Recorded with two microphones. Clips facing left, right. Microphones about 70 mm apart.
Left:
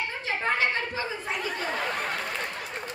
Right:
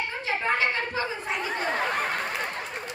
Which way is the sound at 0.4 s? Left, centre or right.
Right.